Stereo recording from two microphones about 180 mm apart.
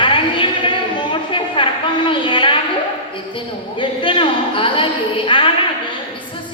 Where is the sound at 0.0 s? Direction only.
25° left (ahead or behind).